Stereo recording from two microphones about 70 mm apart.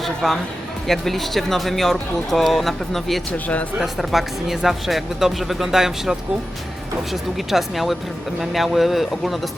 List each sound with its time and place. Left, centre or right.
0.0 s speech: centre
3.3 s speech: left
3.8 s speech: centre